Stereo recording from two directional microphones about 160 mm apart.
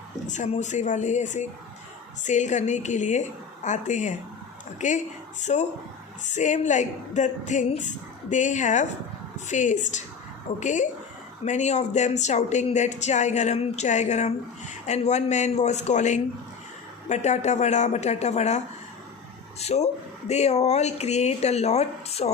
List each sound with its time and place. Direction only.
0.3 s speech: 45° left (ahead or behind)